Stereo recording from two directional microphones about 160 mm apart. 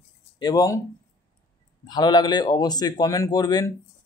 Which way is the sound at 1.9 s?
25° left (ahead or behind).